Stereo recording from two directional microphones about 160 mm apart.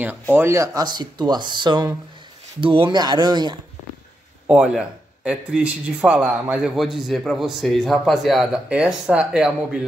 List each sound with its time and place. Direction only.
0.0 s speech: 15° right (ahead or behind)
4.5 s speech: 5° right (ahead or behind)